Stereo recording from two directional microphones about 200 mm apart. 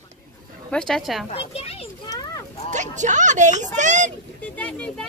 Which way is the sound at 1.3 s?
30° left (ahead or behind).